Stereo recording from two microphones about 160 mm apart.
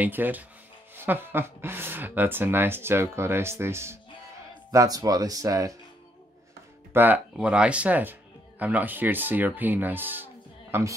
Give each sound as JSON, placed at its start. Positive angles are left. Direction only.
{"t": 0.0, "sound": "speech", "side_deg": -10}
{"t": 6.9, "sound": "speech", "side_deg": -10}